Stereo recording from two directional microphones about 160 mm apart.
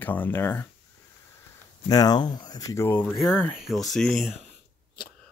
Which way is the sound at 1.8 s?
25° left (ahead or behind).